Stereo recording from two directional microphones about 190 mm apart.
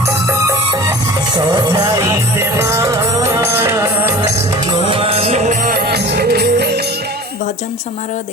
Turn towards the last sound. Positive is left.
turn(degrees=-60)  # may be behind; listen again after turning